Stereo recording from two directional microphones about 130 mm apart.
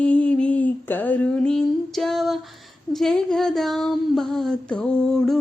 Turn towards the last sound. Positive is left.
turn(degrees=5)  # may be behind; listen again after turning